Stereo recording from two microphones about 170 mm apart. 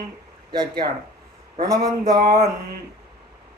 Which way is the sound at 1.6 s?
65° right (ahead or behind).